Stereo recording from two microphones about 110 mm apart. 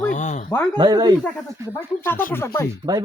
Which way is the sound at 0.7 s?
40° right (ahead or behind).